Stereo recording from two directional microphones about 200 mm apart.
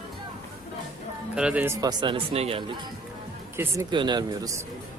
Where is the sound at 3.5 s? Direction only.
10° right (ahead or behind).